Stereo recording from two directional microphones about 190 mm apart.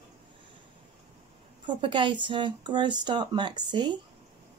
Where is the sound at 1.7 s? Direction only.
25° right (ahead or behind).